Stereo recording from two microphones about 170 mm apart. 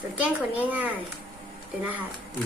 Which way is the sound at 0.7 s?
10° right (ahead or behind).